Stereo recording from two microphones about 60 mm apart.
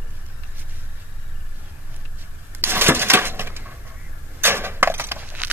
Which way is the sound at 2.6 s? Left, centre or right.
Right.